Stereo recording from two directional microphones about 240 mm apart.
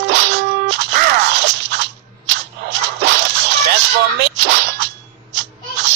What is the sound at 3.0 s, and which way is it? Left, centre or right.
Music, right.